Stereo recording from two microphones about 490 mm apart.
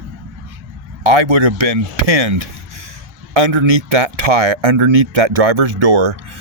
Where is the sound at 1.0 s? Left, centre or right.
Right.